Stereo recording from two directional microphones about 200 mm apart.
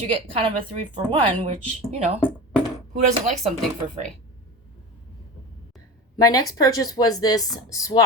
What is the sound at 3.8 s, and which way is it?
Speech, 35° right (ahead or behind).